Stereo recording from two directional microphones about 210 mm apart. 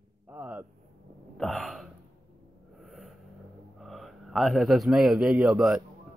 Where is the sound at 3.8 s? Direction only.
Centre (ahead or behind).